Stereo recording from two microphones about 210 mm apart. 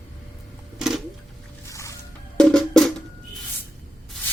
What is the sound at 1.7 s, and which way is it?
Music, 15° left (ahead or behind).